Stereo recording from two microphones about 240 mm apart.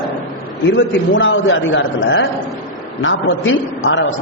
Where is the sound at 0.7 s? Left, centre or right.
Left.